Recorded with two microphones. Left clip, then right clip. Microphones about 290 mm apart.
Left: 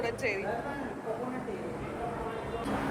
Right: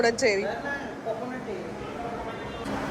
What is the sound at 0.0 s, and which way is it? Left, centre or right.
Speech, right.